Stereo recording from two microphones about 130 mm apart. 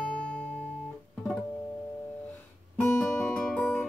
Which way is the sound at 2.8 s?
15° left (ahead or behind).